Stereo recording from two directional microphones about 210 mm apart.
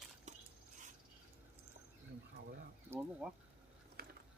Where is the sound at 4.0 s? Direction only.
45° right (ahead or behind).